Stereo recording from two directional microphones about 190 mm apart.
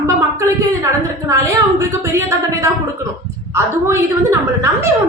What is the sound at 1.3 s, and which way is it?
A woman's voice, 15° right (ahead or behind).